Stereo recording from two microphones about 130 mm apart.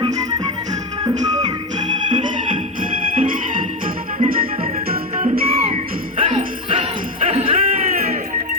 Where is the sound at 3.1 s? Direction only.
90° right.